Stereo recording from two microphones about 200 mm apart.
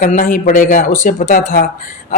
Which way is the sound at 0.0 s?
45° left (ahead or behind).